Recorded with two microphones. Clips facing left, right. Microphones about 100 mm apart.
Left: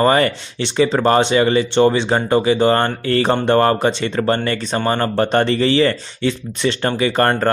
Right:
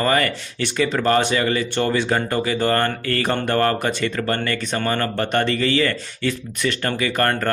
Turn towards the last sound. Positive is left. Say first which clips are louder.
# left 5 dB
turn(degrees=30)  # may be behind; listen again after turning